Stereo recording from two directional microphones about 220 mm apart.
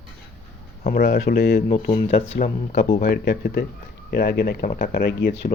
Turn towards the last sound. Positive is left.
turn(degrees=50)  # may be behind; listen again after turning